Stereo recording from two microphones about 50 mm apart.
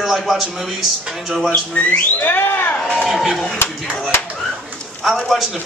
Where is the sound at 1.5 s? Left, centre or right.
Left.